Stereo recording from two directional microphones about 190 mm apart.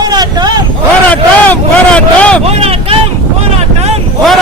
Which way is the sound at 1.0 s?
5° left (ahead or behind).